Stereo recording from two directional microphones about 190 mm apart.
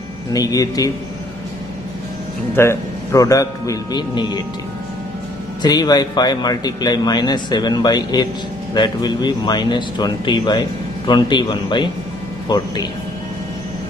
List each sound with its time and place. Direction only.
0.3 s speech: 20° left (ahead or behind)
2.5 s a man's voice: 15° left (ahead or behind)
5.6 s speech: 20° left (ahead or behind)